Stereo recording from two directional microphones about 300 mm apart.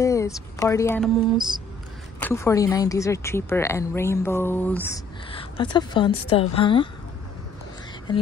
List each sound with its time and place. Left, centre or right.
0.0 s a woman's voice: centre
2.1 s a woman's voice: centre